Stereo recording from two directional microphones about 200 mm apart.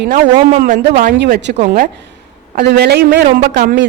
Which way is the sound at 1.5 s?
35° right (ahead or behind).